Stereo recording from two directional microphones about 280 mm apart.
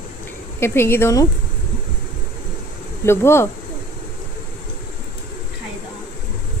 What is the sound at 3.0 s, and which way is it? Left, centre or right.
Speech, centre.